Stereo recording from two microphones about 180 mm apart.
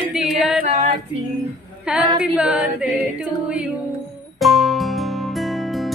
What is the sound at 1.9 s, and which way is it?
Singing, 5° right (ahead or behind).